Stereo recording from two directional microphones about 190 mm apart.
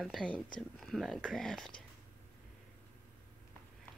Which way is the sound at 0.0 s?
5° left (ahead or behind).